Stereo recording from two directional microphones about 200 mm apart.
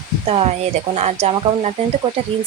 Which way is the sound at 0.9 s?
35° right (ahead or behind).